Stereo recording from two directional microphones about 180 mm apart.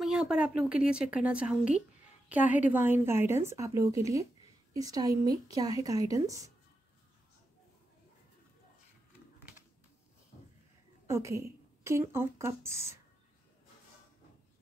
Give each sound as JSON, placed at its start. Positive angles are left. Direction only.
{"t": 0.0, "sound": "a woman's voice", "side_deg": -5}
{"t": 11.1, "sound": "speech", "side_deg": -15}